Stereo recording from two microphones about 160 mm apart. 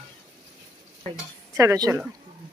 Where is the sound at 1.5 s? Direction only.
20° right (ahead or behind).